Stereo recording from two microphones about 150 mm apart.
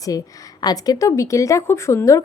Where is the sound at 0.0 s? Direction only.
25° left (ahead or behind).